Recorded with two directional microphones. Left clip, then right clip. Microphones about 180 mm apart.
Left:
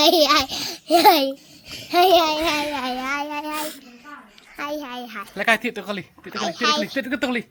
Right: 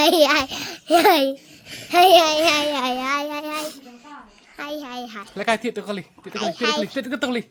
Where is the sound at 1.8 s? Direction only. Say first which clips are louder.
Right 3 dB; 35° right (ahead or behind).